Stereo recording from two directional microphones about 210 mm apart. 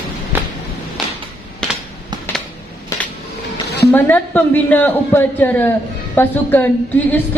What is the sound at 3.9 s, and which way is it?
A man's voice, 10° left (ahead or behind).